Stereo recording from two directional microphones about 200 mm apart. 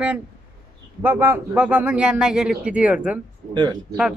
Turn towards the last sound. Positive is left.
turn(degrees=-20)  # may be behind; listen again after turning